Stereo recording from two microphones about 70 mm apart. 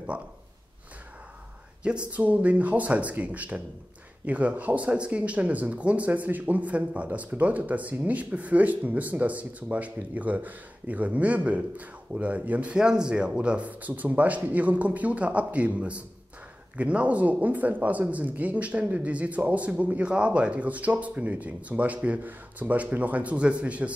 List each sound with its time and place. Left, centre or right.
1.8 s speech: centre